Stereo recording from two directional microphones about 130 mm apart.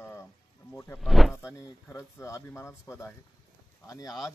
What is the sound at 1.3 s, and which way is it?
Speech, 20° left (ahead or behind).